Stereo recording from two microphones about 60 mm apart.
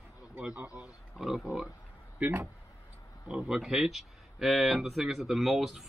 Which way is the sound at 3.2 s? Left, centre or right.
Centre.